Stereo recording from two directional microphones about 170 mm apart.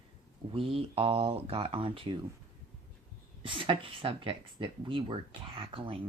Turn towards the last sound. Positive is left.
turn(degrees=-30)  # may be behind; listen again after turning